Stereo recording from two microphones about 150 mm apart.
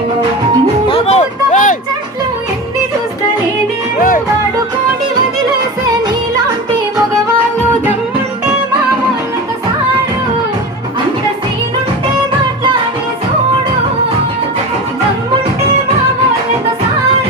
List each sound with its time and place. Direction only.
0.9 s music: 45° left (ahead or behind)
3.9 s music: 70° left (ahead or behind)
5.5 s music: 25° right (ahead or behind)